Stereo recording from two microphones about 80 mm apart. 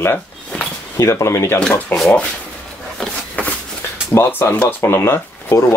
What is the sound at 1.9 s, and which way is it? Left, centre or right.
Speech, left.